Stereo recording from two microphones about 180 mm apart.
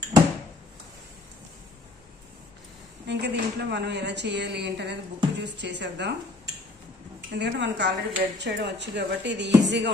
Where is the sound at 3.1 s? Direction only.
70° right (ahead or behind).